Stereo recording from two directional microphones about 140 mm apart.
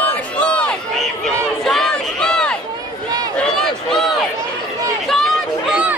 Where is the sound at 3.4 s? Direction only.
5° left (ahead or behind).